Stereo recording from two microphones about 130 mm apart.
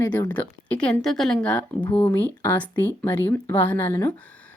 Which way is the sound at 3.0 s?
15° left (ahead or behind).